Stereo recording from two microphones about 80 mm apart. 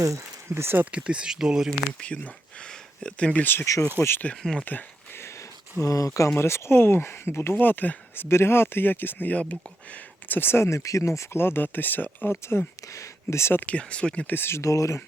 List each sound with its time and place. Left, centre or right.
0.0 s speech: right
0.9 s speech: centre
1.9 s speech: centre
4.0 s speech: left
4.7 s speech: left
5.8 s speech: left
6.3 s speech: left; by 14.3 s centre
14.3 s speech: left